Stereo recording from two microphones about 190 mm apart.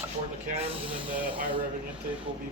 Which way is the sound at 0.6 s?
30° right (ahead or behind).